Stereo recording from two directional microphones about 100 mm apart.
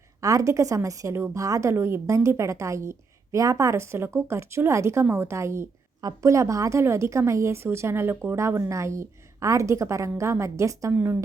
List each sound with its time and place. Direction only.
0.2 s a woman's voice: 35° right (ahead or behind)
10.9 s a woman's voice: 20° right (ahead or behind)